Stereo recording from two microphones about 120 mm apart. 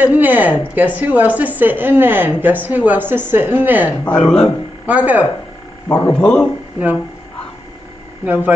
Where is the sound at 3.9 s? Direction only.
10° left (ahead or behind).